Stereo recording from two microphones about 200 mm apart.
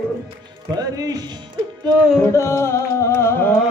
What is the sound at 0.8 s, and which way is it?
Speech, 20° right (ahead or behind).